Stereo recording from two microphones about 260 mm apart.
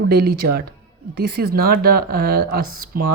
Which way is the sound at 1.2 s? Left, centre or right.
Right.